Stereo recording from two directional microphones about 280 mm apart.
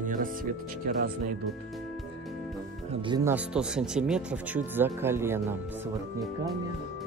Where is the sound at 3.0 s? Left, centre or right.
Centre.